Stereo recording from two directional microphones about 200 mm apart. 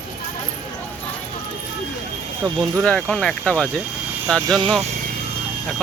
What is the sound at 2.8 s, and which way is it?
Speech, 5° left (ahead or behind).